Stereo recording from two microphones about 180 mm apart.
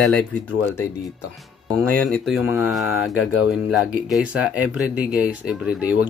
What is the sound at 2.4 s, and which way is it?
Speech, 15° right (ahead or behind).